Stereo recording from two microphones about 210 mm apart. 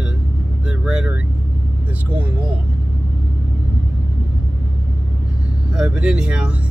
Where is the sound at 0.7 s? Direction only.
5° right (ahead or behind).